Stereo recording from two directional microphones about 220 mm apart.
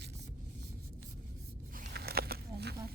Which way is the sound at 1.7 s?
45° right (ahead or behind).